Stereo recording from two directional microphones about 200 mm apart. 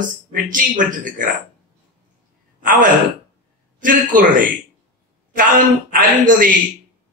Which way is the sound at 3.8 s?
40° right (ahead or behind).